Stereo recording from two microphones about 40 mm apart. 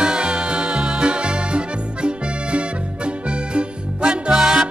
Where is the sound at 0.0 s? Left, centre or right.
Right.